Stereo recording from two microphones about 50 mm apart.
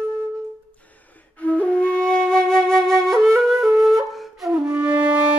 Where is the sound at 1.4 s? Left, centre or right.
Left; by 4.5 s centre.